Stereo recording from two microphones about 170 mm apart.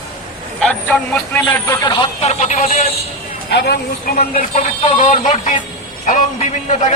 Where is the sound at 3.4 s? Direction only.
75° left (ahead or behind); by 4.5 s 60° left (ahead or behind).